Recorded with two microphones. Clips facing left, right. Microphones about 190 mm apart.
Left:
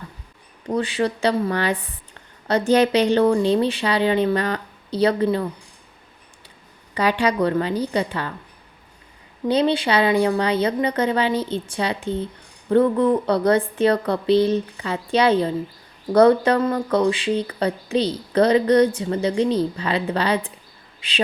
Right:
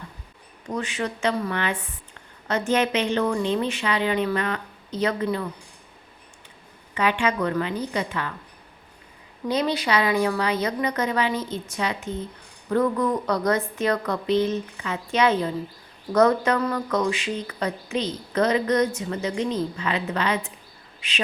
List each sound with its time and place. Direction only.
0.7 s speech: 35° left (ahead or behind)
6.9 s speech: 35° left (ahead or behind)
9.5 s speech: 30° left (ahead or behind)